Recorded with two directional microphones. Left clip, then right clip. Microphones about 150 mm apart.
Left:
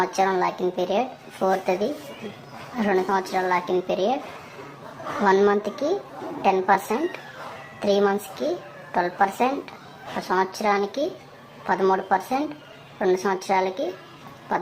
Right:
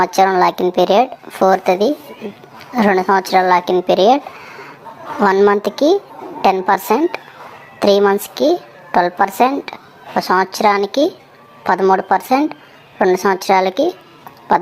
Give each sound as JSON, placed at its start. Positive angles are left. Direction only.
{"t": 0.0, "sound": "a child's voice", "side_deg": -45}
{"t": 5.2, "sound": "a child's voice", "side_deg": -40}
{"t": 14.5, "sound": "a sound", "side_deg": -45}